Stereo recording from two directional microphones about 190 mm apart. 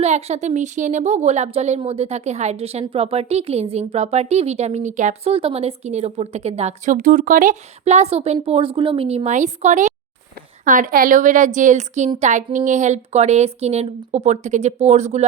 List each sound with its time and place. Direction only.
0.0 s a woman's voice: 35° right (ahead or behind)